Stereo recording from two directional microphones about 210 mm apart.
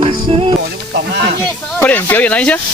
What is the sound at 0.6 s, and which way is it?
Snake, 50° right (ahead or behind).